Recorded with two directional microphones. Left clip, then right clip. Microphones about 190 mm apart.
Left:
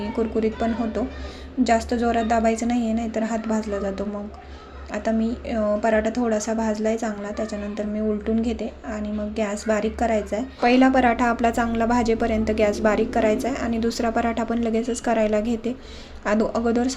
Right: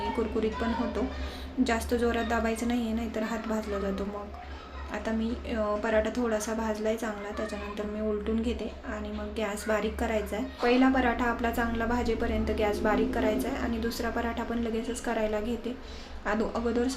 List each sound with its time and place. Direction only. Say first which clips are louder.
0.3 s a woman's voice: left 6 dB; 30° left (ahead or behind)